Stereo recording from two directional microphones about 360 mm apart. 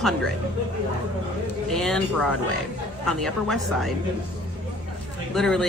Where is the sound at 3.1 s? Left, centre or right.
Centre.